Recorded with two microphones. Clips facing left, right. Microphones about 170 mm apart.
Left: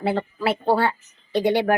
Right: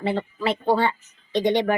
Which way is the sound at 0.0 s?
10° left (ahead or behind).